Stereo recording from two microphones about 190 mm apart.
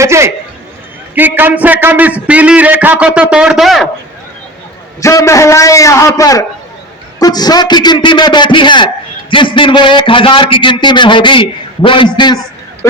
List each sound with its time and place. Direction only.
0.0 s a man's voice: 15° right (ahead or behind)
4.9 s a man's voice: 15° left (ahead or behind)